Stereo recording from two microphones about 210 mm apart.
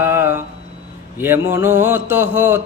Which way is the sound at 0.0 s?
10° right (ahead or behind).